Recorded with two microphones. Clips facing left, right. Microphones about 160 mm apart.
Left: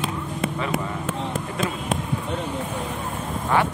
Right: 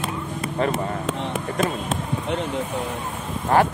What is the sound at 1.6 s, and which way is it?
Speech, 45° right (ahead or behind).